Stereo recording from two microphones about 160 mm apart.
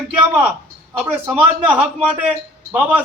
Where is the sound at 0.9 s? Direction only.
10° right (ahead or behind).